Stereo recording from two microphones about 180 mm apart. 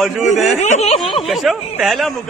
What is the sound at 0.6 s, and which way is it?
Speech, 40° left (ahead or behind).